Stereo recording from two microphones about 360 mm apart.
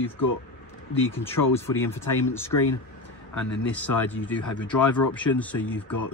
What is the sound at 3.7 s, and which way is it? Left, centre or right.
Speech, centre.